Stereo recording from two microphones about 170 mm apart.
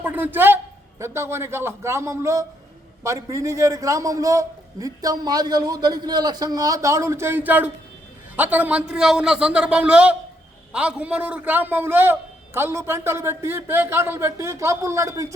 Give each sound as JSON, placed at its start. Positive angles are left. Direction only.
{"t": 0.0, "sound": "a man's voice", "side_deg": -10}